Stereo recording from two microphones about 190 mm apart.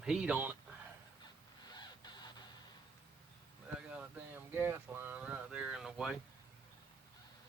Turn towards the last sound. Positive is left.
turn(degrees=-5)  # may be behind; listen again after turning